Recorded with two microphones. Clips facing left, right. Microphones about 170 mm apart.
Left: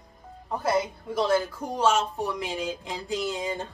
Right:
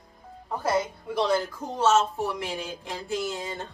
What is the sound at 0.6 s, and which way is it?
Music, 10° right (ahead or behind).